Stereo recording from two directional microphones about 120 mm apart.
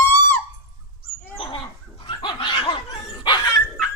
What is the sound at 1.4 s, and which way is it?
Dog, 50° left (ahead or behind).